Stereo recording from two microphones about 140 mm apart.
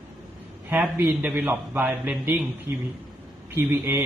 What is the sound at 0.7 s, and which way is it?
A man's voice, 15° right (ahead or behind).